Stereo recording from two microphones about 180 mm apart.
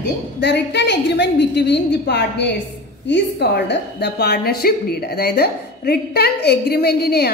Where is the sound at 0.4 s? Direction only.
70° left (ahead or behind).